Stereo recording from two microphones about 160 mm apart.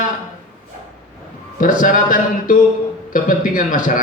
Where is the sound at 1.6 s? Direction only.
55° left (ahead or behind).